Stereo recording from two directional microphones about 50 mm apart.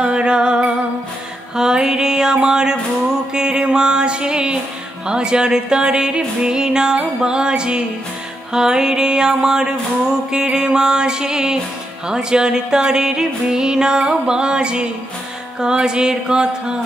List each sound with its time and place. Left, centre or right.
0.0 s music: centre
1.6 s mantra: centre
3.3 s music: centre